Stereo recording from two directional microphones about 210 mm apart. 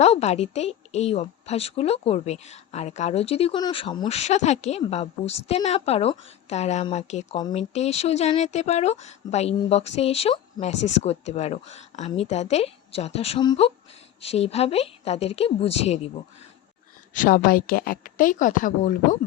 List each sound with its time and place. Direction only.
0.0 s a woman's voice: 30° left (ahead or behind)
7.3 s a woman's voice: 20° left (ahead or behind)
7.7 s a woman's voice: 30° left (ahead or behind)
17.2 s a woman's voice: 40° left (ahead or behind)